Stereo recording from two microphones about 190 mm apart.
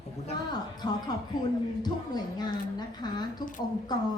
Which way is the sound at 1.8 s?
20° left (ahead or behind).